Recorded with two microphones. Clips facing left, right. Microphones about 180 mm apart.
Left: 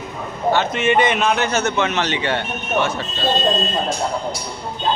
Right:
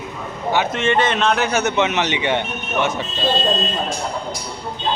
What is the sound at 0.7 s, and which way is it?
Speech, 10° left (ahead or behind).